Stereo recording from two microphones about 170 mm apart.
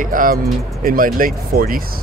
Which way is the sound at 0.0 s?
55° right (ahead or behind).